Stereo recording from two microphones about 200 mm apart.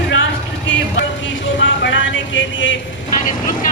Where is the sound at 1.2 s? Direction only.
70° left (ahead or behind).